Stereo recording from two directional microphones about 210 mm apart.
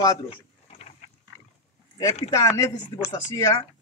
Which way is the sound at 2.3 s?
15° left (ahead or behind).